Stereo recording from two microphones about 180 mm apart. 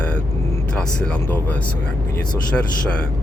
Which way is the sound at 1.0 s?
5° left (ahead or behind).